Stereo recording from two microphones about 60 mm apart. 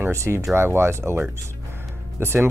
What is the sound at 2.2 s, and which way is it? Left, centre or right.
Speech, right.